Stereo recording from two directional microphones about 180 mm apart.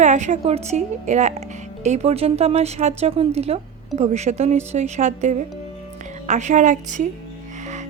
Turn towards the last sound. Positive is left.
turn(degrees=-45)  # may be behind; listen again after turning